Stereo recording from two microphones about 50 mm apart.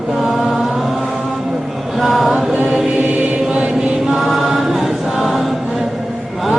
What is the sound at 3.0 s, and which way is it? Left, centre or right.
Chant, right.